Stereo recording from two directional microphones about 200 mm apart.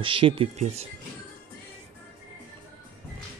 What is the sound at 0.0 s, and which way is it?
Speech, 25° right (ahead or behind).